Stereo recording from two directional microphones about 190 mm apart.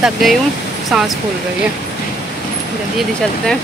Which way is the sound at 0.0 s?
Centre (ahead or behind).